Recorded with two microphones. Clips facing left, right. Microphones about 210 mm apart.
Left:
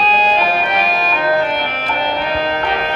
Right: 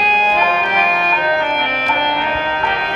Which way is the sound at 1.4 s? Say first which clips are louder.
Left 1 dB; 35° left (ahead or behind).